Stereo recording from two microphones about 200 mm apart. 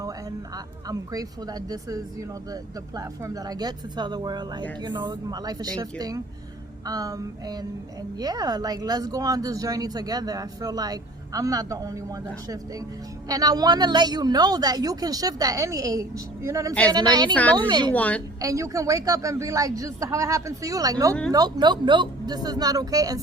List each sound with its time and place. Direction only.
0.0 s a woman's voice: 15° right (ahead or behind)
13.2 s speech: 20° right (ahead or behind)
17.3 s a woman's voice: 5° left (ahead or behind)
17.7 s speech: 20° right (ahead or behind)
17.9 s a woman's voice: 5° left (ahead or behind)
18.3 s a man's voice: 15° right (ahead or behind)